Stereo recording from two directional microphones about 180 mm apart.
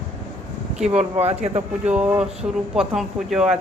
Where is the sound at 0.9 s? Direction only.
35° right (ahead or behind).